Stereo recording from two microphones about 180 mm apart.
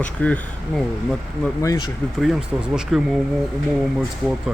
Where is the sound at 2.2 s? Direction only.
5° right (ahead or behind).